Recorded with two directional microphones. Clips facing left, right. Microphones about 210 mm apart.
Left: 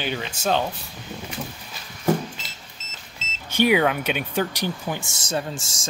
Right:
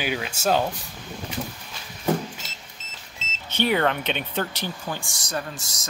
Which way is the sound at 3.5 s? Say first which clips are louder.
Left 3 dB; 10° left (ahead or behind).